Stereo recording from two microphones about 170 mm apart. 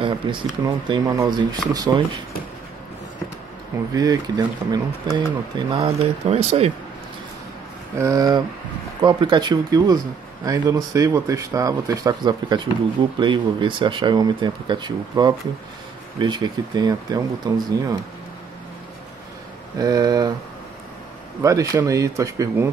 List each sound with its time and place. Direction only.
0.0 s speech: 30° right (ahead or behind)
3.9 s speech: 20° right (ahead or behind)
5.9 s speech: 35° right (ahead or behind)
8.0 s speech: 20° right (ahead or behind)
19.8 s speech: 20° right (ahead or behind)
21.4 s speech: 20° right (ahead or behind)